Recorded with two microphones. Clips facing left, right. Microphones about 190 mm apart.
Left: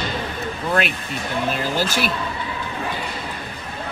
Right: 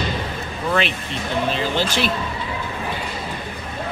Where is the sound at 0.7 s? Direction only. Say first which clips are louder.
Right 1 dB; 5° left (ahead or behind).